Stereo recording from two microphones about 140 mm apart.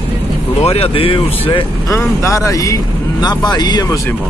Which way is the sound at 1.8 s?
20° left (ahead or behind).